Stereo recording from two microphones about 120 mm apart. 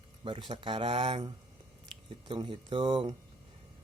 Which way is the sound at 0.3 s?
45° right (ahead or behind).